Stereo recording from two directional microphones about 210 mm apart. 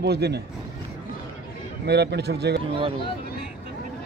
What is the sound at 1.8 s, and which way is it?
Speech, 55° right (ahead or behind).